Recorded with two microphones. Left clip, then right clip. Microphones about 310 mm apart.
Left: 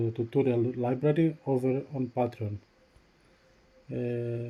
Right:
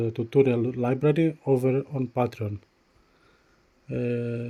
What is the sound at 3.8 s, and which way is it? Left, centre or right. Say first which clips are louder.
Speech: right 4 dB; right.